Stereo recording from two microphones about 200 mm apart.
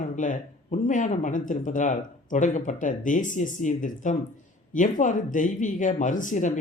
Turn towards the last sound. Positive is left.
turn(degrees=40)  # may be behind; listen again after turning